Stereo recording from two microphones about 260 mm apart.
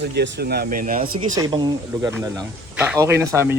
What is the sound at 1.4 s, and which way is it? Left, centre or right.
Speech, centre.